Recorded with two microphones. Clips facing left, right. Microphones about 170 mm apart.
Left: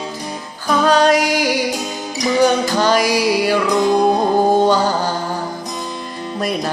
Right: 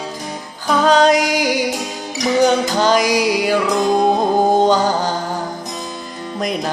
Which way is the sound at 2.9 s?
15° right (ahead or behind).